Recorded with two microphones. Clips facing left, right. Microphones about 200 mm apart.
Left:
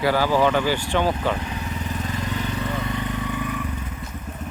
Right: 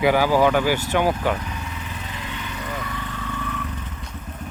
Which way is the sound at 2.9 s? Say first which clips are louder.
Left 4 dB; 20° left (ahead or behind).